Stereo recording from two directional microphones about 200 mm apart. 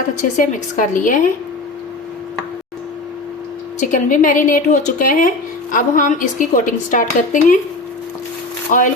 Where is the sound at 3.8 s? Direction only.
40° left (ahead or behind).